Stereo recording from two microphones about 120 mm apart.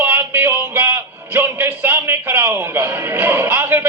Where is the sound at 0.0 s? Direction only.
15° right (ahead or behind).